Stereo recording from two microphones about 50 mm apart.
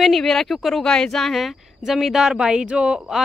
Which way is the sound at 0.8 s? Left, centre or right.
Centre.